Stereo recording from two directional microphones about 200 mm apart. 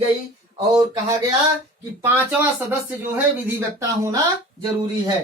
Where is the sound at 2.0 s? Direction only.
10° right (ahead or behind).